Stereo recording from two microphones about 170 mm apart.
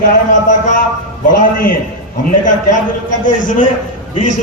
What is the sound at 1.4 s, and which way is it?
Speech, 55° left (ahead or behind).